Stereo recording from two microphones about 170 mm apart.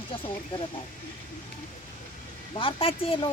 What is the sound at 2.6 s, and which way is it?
Speech, 35° left (ahead or behind).